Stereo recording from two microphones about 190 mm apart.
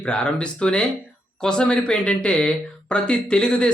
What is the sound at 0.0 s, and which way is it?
Speech, 5° left (ahead or behind).